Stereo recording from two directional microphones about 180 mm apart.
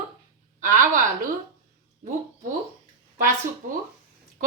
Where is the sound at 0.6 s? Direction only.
45° right (ahead or behind).